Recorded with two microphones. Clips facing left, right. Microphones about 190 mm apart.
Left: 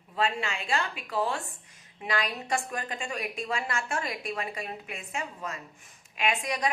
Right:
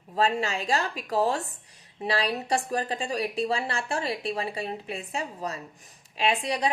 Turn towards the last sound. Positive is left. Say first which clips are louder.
# right 3 dB
turn(degrees=-30)  # may be behind; listen again after turning